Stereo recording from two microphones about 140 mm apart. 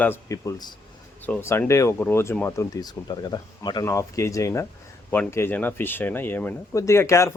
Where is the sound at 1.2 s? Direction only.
10° left (ahead or behind).